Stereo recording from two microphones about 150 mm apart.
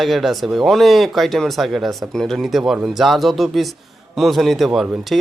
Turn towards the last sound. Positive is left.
turn(degrees=0)  # may be behind; listen again after turning